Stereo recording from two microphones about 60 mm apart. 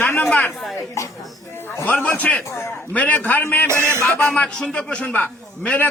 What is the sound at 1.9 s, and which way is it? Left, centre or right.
A man's voice, left.